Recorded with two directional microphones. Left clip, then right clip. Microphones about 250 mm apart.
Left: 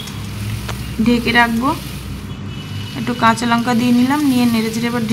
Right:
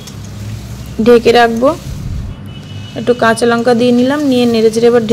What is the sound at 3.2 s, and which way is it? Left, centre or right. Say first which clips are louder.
Speech: right 1 dB; centre.